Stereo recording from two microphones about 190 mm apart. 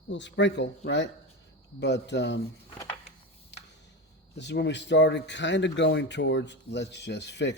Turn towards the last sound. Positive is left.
turn(degrees=65)  # may be behind; listen again after turning